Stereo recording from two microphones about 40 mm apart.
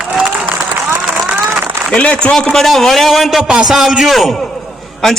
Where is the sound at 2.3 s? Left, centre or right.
Centre.